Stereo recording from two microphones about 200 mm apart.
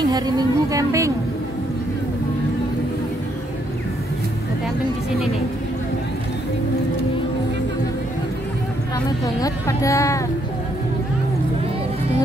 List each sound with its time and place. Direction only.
0.0 s a woman's voice: 20° right (ahead or behind)
9.2 s speech: 15° left (ahead or behind)